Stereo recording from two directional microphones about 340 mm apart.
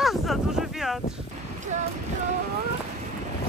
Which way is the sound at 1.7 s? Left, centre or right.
Right.